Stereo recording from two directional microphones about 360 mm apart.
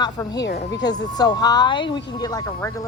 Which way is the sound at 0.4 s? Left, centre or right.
Left.